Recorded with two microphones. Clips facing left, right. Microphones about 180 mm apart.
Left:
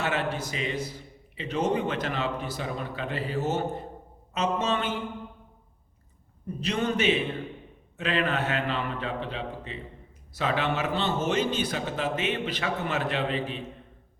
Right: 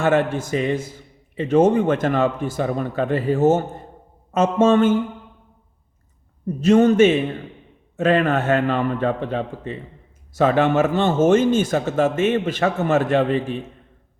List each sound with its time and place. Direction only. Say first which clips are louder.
0.0 s a man's voice: right 10 dB; 50° right (ahead or behind)
6.6 s a man's voice: right 14 dB; 45° right (ahead or behind)